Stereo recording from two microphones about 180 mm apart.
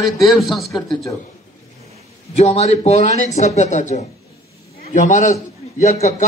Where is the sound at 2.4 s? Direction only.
35° left (ahead or behind).